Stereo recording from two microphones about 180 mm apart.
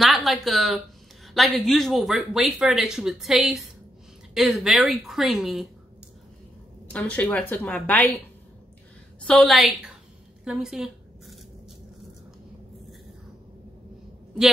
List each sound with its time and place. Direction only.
0.0 s speech: centre (ahead or behind)
6.9 s a woman's voice: 10° left (ahead or behind)
9.2 s speech: centre (ahead or behind)
10.4 s a sound: 5° right (ahead or behind)